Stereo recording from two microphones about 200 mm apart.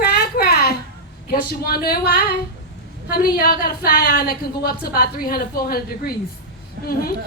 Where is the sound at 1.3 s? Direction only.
50° left (ahead or behind).